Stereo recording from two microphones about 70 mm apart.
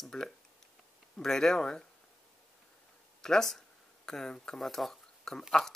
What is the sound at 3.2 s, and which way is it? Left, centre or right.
Speech, centre.